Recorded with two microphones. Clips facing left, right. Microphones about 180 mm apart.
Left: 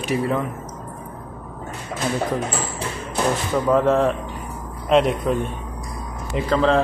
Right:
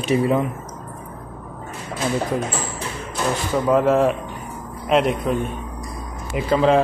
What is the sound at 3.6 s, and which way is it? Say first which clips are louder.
Speech: right 1 dB; 5° right (ahead or behind).